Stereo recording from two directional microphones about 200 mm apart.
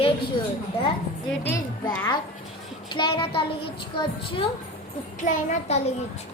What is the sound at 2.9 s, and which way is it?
A child's voice, 25° left (ahead or behind).